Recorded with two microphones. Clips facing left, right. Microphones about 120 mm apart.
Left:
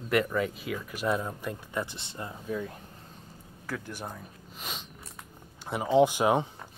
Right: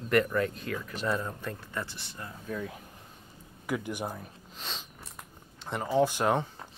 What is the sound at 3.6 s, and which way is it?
Speech, 15° right (ahead or behind).